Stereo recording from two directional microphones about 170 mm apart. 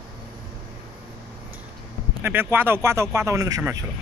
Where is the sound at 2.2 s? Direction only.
15° right (ahead or behind).